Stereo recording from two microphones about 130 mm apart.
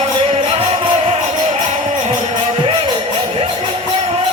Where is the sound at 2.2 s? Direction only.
40° right (ahead or behind).